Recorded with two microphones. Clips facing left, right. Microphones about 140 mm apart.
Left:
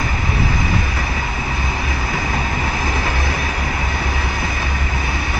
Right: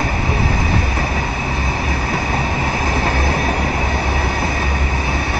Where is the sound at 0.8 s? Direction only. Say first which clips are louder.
Right 3 dB; 45° right (ahead or behind).